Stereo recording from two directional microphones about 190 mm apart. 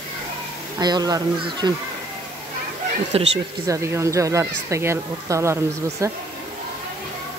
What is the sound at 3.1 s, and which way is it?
Speech, 30° right (ahead or behind).